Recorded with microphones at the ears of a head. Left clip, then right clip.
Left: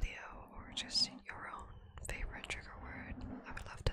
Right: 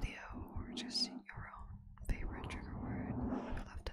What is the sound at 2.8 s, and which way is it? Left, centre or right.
Whispering, right.